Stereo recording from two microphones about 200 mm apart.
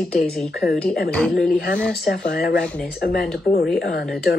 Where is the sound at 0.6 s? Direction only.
50° left (ahead or behind).